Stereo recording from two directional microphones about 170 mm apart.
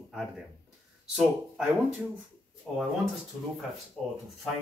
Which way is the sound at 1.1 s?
5° right (ahead or behind).